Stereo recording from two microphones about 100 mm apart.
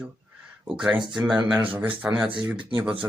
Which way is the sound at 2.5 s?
55° right (ahead or behind).